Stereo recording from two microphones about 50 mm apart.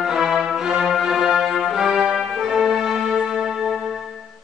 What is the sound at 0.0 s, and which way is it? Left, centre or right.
Music, centre.